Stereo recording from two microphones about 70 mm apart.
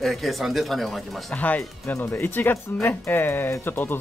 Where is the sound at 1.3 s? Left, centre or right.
Left.